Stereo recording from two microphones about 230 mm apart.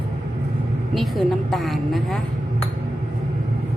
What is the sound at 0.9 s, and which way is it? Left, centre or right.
A woman's voice, centre.